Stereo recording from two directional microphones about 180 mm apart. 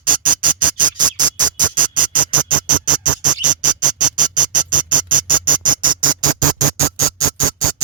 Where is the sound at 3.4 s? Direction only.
45° right (ahead or behind).